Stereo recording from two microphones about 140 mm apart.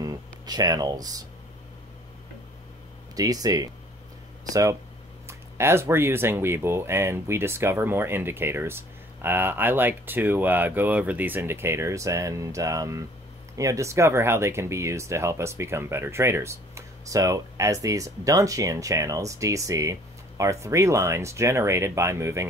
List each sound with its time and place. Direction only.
0.0 s speech: 25° right (ahead or behind)
3.2 s speech: 25° right (ahead or behind)